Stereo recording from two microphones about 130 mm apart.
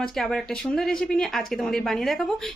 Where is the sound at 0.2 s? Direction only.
5° left (ahead or behind).